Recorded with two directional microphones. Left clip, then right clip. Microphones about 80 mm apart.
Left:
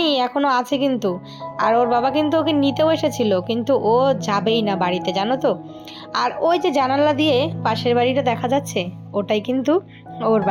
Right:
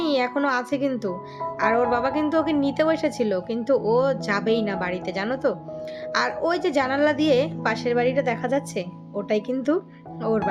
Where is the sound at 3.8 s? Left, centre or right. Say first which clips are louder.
Left 6 dB; left.